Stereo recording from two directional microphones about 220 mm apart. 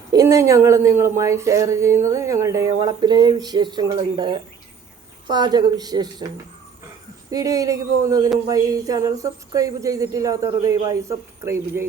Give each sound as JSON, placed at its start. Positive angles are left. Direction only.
{"t": 0.1, "sound": "a woman's voice", "side_deg": -15}
{"t": 7.3, "sound": "speech", "side_deg": -15}